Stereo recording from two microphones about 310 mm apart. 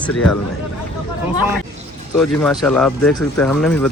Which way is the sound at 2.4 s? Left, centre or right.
Centre.